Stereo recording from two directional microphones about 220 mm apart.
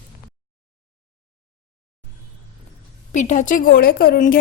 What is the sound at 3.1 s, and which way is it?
A woman's voice, 35° left (ahead or behind).